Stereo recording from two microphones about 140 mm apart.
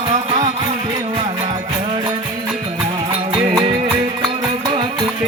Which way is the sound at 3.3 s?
40° right (ahead or behind).